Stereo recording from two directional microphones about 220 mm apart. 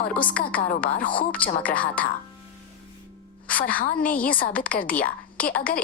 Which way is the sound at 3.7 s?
40° left (ahead or behind).